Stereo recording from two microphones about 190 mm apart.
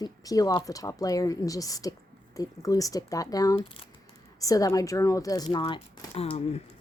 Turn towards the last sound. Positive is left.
turn(degrees=30)  # may be behind; listen again after turning